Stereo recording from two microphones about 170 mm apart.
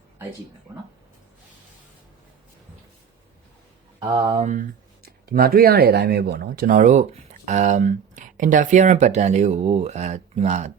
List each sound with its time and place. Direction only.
4.0 s speech: 35° right (ahead or behind)